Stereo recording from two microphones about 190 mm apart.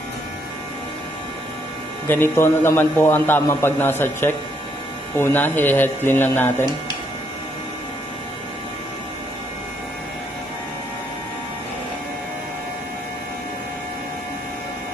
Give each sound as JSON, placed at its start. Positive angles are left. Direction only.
{"t": 2.0, "sound": "a man's voice", "side_deg": 10}